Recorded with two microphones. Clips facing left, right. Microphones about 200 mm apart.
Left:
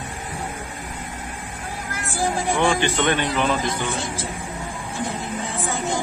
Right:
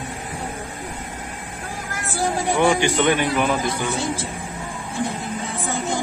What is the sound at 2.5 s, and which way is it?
Speech, 15° right (ahead or behind).